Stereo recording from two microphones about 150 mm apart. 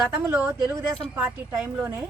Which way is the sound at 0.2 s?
15° right (ahead or behind).